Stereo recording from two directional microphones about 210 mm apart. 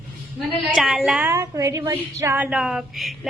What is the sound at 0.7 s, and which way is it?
A woman's voice, centre (ahead or behind).